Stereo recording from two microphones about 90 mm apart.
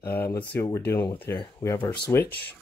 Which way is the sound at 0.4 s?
15° left (ahead or behind).